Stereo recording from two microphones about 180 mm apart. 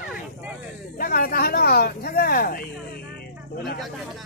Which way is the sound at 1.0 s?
55° left (ahead or behind).